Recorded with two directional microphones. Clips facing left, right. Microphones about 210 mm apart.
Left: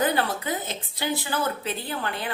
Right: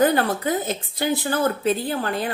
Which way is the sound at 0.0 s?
45° right (ahead or behind).